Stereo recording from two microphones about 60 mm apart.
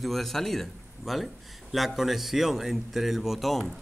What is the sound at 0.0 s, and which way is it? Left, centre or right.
A man's voice, centre.